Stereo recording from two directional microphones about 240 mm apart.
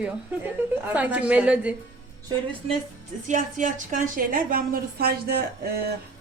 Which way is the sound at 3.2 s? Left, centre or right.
Right.